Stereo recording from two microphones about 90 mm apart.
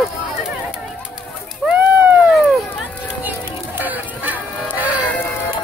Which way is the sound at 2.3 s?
Centre (ahead or behind).